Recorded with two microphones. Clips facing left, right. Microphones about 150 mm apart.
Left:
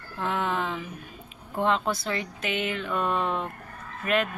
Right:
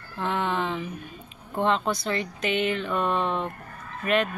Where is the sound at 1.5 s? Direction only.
Centre (ahead or behind).